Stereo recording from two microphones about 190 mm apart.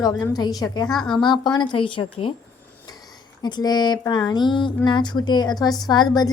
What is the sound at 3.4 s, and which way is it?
A woman's voice, 20° left (ahead or behind).